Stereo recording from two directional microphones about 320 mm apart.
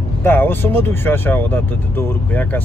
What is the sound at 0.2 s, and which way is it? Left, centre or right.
Speech, centre.